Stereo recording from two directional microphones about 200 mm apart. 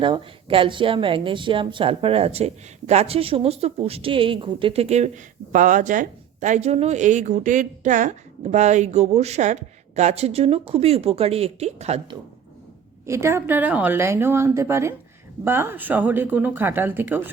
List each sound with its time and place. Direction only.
0.0 s a woman's voice: 25° right (ahead or behind)
13.1 s a woman's voice: 15° right (ahead or behind)